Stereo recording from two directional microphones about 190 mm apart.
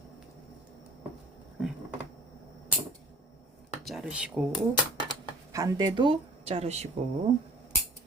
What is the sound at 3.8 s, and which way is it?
Speech, 5° right (ahead or behind).